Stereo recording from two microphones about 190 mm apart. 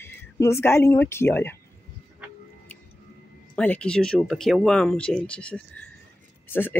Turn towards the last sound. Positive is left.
turn(degrees=10)  # may be behind; listen again after turning